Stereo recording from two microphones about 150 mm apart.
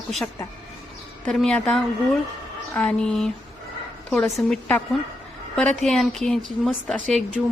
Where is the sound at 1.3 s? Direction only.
5° left (ahead or behind).